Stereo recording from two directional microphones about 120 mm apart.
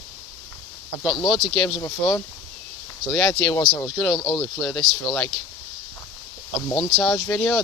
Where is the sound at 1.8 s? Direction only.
25° left (ahead or behind).